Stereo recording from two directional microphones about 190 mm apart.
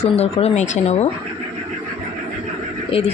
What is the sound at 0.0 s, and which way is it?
Speech, 35° left (ahead or behind).